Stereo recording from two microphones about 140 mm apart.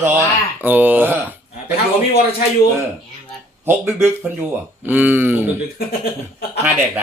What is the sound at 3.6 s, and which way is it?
Speech, 15° right (ahead or behind).